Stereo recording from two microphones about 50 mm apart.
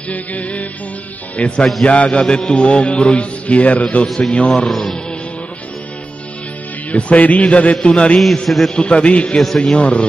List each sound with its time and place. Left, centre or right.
0.1 s music: left
1.6 s a man's voice: centre
1.9 s mantra: left
4.5 s a man's voice: centre
6.9 s mantra: left
8.5 s a man's voice: centre
8.7 s mantra: left